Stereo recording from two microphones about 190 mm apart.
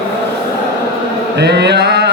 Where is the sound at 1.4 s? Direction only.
60° right (ahead or behind).